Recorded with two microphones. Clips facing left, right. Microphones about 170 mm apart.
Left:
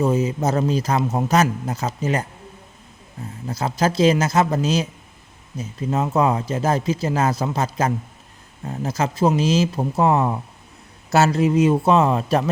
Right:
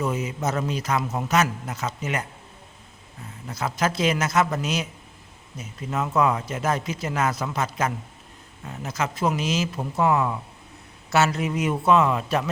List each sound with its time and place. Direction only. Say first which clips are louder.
0.0 s speech: left 6 dB; 30° left (ahead or behind)
3.4 s speech: left 4 dB; 30° left (ahead or behind)